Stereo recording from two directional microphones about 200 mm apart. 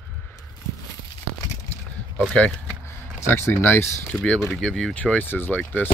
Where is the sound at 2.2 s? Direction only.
5° left (ahead or behind).